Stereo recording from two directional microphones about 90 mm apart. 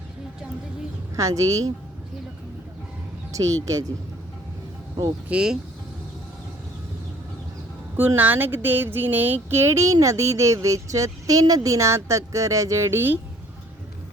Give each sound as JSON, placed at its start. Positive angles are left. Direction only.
{"t": 1.1, "sound": "speech", "side_deg": -40}
{"t": 3.3, "sound": "speech", "side_deg": -40}
{"t": 5.3, "sound": "speech", "side_deg": -10}
{"t": 7.9, "sound": "speech", "side_deg": -20}